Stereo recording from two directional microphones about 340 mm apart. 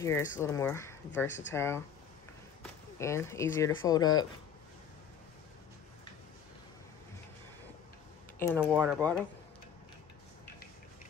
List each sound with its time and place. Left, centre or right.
0.0 s speech: centre
8.5 s speech: centre